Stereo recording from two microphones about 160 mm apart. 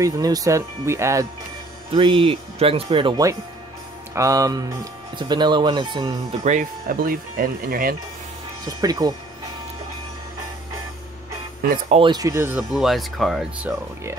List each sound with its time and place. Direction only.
0.0 s speech: 20° right (ahead or behind)
1.9 s speech: 35° right (ahead or behind)
4.1 s speech: 20° right (ahead or behind)
6.4 s speech: 50° right (ahead or behind)
8.6 s speech: 25° right (ahead or behind)
11.9 s speech: 30° right (ahead or behind); by 12.6 s 15° right (ahead or behind)
12.7 s speech: centre (ahead or behind)